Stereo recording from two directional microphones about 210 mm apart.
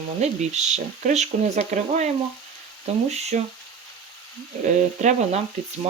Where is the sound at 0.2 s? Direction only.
35° right (ahead or behind).